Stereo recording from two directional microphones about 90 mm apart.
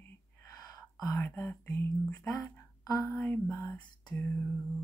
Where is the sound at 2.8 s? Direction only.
40° left (ahead or behind).